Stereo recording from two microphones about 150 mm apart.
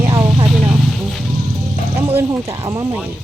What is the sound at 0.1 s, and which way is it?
Vehicle, 25° right (ahead or behind).